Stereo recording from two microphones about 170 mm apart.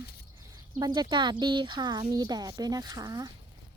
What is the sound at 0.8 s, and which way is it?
A woman's voice, 25° right (ahead or behind).